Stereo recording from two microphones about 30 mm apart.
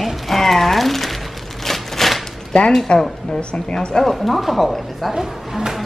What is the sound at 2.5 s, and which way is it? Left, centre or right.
A woman's voice, left.